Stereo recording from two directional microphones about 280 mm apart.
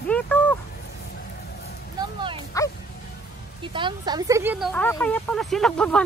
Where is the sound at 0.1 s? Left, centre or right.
Centre.